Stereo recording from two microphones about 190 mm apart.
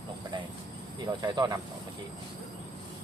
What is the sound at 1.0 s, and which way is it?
Speech, 20° right (ahead or behind).